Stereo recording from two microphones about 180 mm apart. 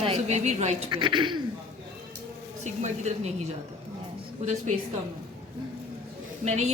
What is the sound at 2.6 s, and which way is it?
Speech, 40° right (ahead or behind).